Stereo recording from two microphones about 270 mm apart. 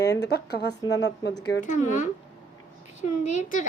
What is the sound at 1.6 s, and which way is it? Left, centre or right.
Speech, left.